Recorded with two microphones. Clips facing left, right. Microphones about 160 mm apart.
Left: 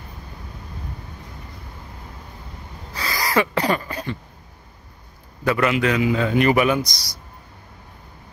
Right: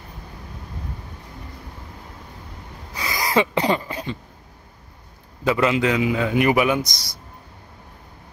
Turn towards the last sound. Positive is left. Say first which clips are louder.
# left 1 dB
turn(degrees=-50)  # may be behind; listen again after turning